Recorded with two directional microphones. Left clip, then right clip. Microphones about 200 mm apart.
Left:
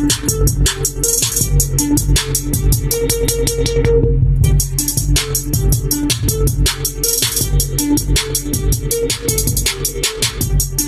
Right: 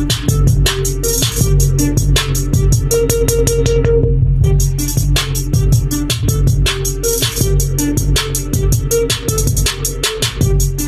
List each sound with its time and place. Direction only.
0.0 s music: centre (ahead or behind)
2.9 s music: 30° right (ahead or behind)
5.5 s music: 15° right (ahead or behind)